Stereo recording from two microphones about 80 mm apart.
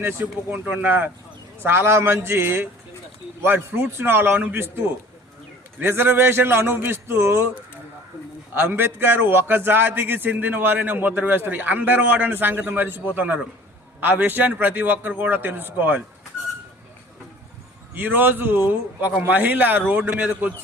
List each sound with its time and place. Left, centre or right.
0.0 s a man's voice: right
5.8 s a man's voice: right
8.5 s a man's voice: right
17.9 s a man's voice: right